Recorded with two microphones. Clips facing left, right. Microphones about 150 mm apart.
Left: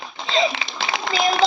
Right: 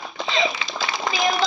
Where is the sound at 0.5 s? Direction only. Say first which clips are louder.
Left 1 dB; 70° left (ahead or behind).